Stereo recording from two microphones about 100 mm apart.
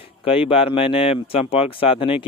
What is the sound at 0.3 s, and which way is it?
Speech, 70° left (ahead or behind).